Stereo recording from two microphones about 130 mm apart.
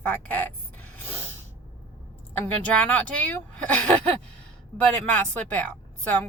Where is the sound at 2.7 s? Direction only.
10° left (ahead or behind).